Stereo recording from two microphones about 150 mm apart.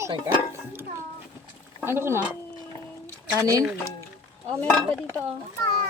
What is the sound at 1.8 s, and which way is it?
Speech, 15° right (ahead or behind).